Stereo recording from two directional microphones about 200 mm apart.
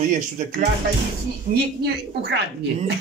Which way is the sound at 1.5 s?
45° right (ahead or behind).